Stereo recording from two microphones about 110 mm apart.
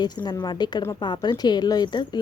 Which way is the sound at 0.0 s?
40° left (ahead or behind).